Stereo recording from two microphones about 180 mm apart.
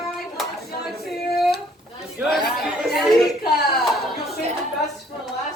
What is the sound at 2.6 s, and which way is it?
Chatter, centre (ahead or behind).